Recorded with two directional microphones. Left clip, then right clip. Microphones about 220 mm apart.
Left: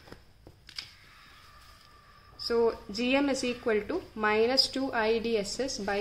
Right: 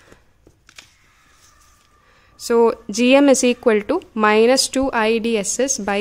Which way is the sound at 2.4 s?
55° right (ahead or behind).